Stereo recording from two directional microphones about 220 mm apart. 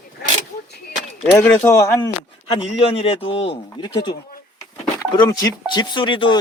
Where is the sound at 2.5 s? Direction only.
25° left (ahead or behind).